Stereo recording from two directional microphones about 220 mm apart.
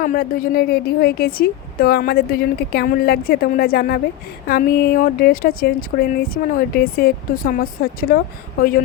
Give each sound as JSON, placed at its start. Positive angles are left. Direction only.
{"t": 0.0, "sound": "a woman's voice", "side_deg": 40}